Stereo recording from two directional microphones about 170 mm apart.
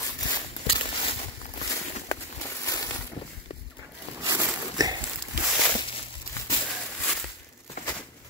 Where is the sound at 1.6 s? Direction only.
20° left (ahead or behind).